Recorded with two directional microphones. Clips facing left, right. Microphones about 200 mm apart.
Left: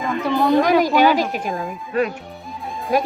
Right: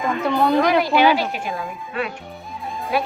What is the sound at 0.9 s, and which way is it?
Speech, 40° left (ahead or behind).